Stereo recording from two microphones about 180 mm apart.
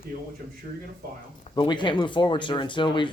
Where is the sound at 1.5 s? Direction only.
25° left (ahead or behind).